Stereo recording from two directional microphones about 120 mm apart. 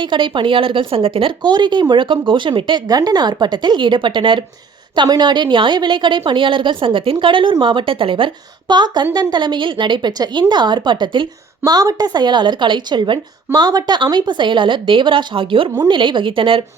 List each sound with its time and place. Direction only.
0.0 s a woman's voice: 40° right (ahead or behind)